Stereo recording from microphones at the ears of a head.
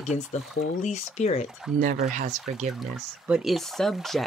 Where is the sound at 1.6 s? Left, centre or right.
Right.